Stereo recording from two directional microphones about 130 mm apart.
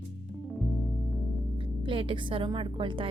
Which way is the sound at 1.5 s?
40° right (ahead or behind).